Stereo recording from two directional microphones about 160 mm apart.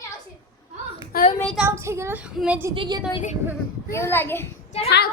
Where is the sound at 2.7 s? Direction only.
30° right (ahead or behind).